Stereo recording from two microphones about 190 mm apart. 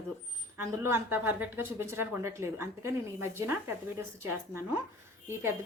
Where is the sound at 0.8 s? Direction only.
10° right (ahead or behind).